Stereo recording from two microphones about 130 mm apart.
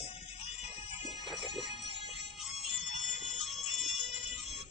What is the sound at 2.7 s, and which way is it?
Music, 65° left (ahead or behind).